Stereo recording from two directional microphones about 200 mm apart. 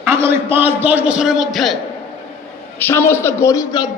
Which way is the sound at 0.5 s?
10° right (ahead or behind).